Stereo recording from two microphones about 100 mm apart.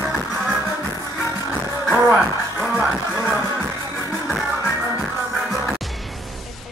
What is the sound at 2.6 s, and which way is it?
Music, 5° right (ahead or behind).